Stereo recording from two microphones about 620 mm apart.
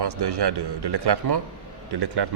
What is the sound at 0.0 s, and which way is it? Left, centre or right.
A man's voice, right.